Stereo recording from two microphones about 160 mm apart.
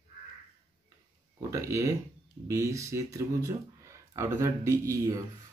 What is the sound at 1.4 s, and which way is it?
Speech, 20° right (ahead or behind).